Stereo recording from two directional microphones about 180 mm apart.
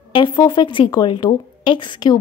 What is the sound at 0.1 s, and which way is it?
Speech, 25° left (ahead or behind).